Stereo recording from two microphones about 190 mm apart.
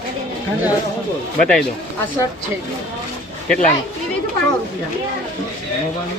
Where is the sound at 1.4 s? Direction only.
5° left (ahead or behind).